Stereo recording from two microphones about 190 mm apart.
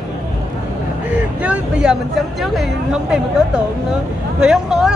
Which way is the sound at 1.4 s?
5° right (ahead or behind).